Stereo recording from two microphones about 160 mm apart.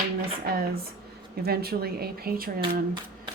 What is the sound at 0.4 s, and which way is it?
Speech, 70° right (ahead or behind).